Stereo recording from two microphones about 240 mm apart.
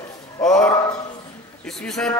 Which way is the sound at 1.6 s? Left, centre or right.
Centre.